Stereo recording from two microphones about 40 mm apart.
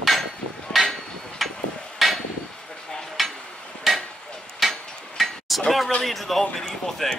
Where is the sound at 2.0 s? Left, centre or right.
Centre.